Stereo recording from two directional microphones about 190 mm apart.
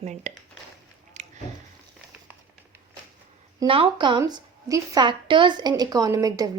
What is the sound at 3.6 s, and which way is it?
A woman's voice, 25° right (ahead or behind).